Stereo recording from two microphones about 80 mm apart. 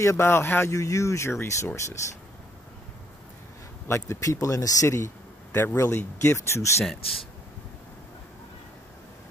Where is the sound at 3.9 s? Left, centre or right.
Left.